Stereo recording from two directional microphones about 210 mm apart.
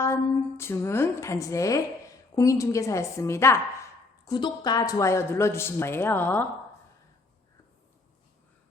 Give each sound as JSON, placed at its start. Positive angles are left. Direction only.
{"t": 0.0, "sound": "speech", "side_deg": 10}